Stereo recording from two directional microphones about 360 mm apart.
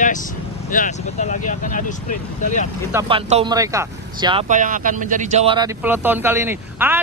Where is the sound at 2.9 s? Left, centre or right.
Centre.